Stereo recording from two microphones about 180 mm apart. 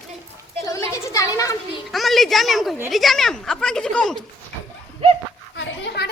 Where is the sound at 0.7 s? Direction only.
15° left (ahead or behind).